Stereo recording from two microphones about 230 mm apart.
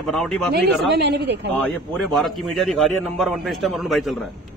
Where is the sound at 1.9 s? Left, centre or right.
Centre.